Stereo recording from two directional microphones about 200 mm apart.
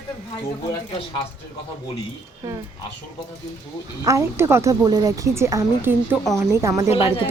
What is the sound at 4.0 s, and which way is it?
Speech, 15° right (ahead or behind).